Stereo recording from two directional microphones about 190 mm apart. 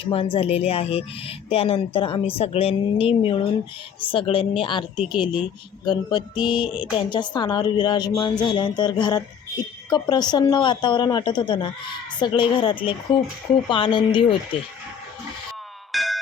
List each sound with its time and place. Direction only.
0.0 s a woman's voice: 30° left (ahead or behind)
15.9 s music: centre (ahead or behind)